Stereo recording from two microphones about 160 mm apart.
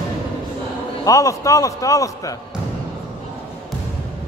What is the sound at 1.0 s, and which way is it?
A man's voice, 20° left (ahead or behind).